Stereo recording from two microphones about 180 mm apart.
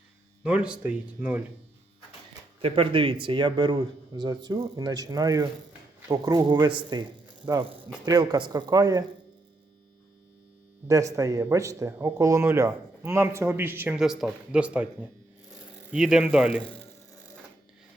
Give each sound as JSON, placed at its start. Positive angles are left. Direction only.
{"t": 0.4, "sound": "a man's voice", "side_deg": -5}
{"t": 2.6, "sound": "speech", "side_deg": -30}
{"t": 10.8, "sound": "a man's voice", "side_deg": -20}
{"t": 15.9, "sound": "a man's voice", "side_deg": -5}